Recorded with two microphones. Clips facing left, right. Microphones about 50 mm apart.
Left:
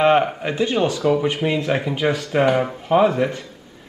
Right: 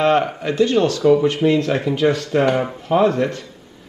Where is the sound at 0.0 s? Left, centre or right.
Centre.